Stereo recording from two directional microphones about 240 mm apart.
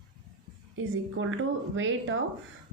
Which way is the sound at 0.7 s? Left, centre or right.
Right.